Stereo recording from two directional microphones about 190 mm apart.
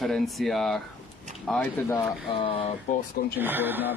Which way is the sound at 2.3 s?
30° left (ahead or behind).